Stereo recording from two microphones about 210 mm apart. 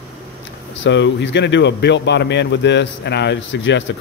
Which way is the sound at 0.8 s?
60° left (ahead or behind).